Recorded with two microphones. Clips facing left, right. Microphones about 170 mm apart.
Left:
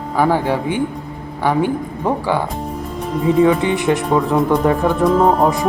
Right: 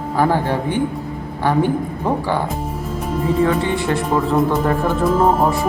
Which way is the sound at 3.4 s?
15° left (ahead or behind).